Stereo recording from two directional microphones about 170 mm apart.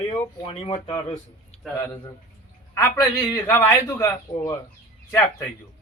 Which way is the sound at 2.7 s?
20° left (ahead or behind).